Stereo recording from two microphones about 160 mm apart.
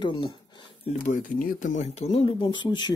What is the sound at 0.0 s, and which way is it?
Speech, 30° left (ahead or behind).